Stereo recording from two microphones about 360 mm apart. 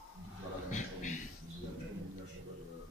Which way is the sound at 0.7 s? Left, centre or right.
Left.